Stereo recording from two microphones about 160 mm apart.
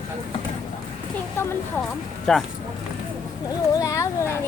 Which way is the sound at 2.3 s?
5° left (ahead or behind).